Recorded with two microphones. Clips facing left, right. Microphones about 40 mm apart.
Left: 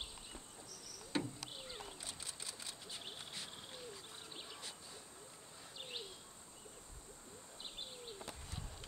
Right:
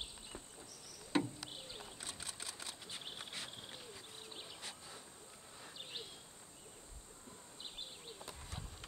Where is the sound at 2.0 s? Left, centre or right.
Right.